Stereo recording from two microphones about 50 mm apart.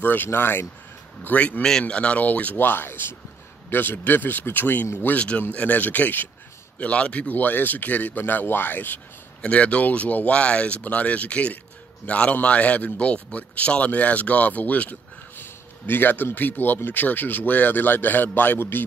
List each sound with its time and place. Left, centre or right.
0.0 s speech: left
1.2 s speech: left
1.6 s speech: centre; by 4.8 s left
5.1 s speech: left
6.8 s speech: left
9.4 s speech: left
15.3 s a sound: left
16.3 s speech: left